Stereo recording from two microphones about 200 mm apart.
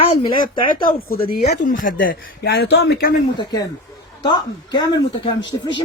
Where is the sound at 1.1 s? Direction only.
50° left (ahead or behind).